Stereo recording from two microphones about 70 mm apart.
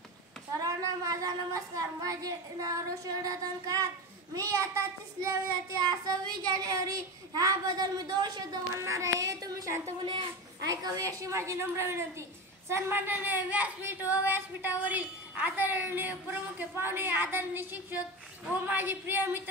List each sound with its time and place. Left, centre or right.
0.6 s a woman's voice: right
5.8 s speech: right
8.7 s a woman's voice: right